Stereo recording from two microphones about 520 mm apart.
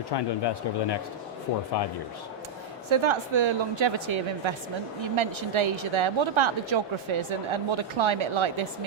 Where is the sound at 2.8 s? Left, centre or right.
Right.